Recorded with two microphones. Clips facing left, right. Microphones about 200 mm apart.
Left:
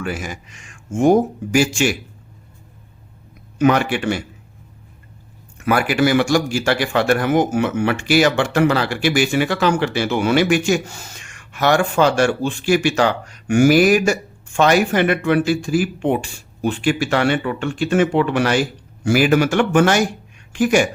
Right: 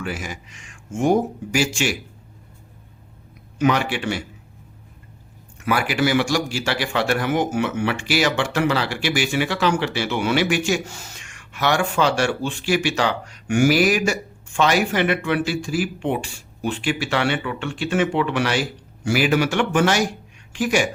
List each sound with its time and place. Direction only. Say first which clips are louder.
0.0 s speech: left 3 dB; 50° left (ahead or behind)
3.6 s speech: left 4 dB; 50° left (ahead or behind)
5.6 s speech: left 4 dB; 50° left (ahead or behind)